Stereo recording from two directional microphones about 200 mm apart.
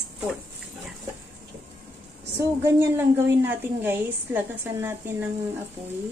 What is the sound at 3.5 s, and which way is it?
A woman's voice, 10° right (ahead or behind).